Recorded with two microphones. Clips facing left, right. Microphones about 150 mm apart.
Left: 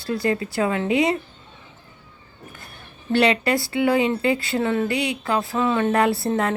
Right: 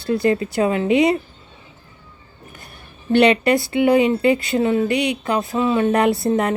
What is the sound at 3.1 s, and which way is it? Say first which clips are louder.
A woman's voice: right 5 dB; 20° right (ahead or behind).